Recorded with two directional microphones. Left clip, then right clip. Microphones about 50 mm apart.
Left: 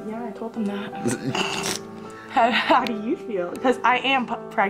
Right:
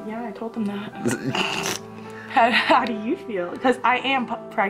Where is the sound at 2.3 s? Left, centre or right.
Centre.